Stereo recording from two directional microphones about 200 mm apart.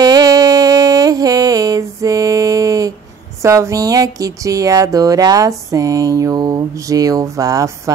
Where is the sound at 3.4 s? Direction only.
15° right (ahead or behind).